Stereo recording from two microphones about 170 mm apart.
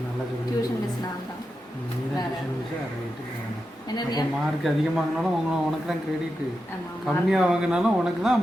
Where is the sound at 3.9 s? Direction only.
25° left (ahead or behind).